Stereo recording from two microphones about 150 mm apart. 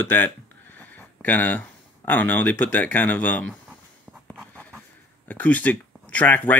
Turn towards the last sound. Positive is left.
turn(degrees=10)  # may be behind; listen again after turning